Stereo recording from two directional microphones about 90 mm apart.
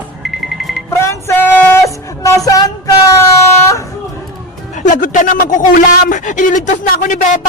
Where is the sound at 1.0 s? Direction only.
30° left (ahead or behind).